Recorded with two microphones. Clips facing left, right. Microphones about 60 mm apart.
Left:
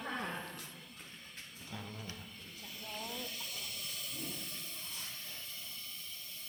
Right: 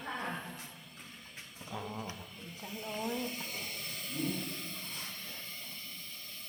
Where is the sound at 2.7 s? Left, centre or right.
Right.